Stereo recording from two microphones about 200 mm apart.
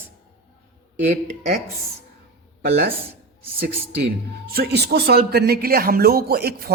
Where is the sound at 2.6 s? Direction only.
50° right (ahead or behind).